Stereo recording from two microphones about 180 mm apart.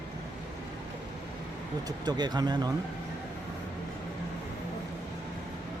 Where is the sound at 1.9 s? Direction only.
25° right (ahead or behind).